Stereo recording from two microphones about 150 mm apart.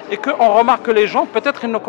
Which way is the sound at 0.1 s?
15° left (ahead or behind).